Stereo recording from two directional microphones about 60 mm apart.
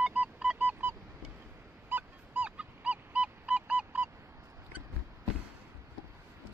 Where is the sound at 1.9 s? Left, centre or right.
Right.